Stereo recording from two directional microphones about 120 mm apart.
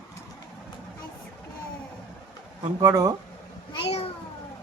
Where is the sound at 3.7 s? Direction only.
55° left (ahead or behind).